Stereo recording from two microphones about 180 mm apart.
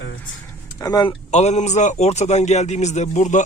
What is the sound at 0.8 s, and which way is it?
Speech, 20° left (ahead or behind).